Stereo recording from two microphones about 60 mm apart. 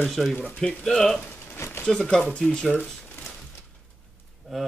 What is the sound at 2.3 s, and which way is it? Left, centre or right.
Speech, centre.